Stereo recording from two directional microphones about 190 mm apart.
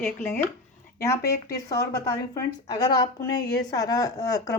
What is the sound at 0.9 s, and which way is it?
Speech, 15° left (ahead or behind).